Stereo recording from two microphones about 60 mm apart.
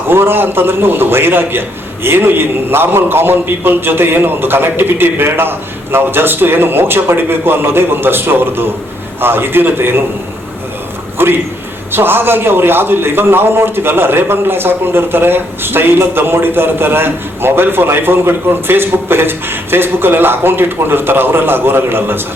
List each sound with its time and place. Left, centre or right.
0.1 s a man's voice: right
11.2 s a man's voice: right